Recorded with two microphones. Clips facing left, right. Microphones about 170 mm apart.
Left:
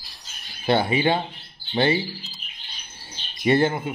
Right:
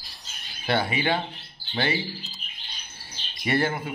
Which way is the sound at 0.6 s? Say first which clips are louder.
Left 5 dB; 25° left (ahead or behind).